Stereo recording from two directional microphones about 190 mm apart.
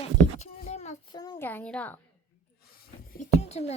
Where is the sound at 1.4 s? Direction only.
10° left (ahead or behind).